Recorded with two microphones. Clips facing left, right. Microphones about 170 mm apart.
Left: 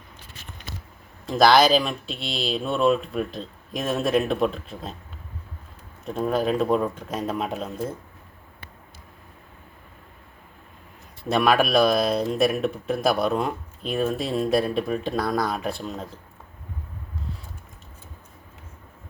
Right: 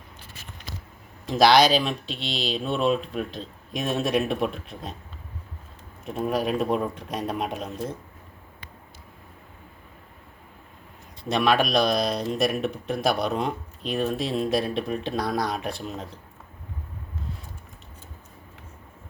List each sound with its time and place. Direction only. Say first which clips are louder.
1.3 s speech: left 1 dB; centre (ahead or behind)
6.1 s speech: left 2 dB; 5° right (ahead or behind)
11.2 s speech: left 2 dB; 5° left (ahead or behind)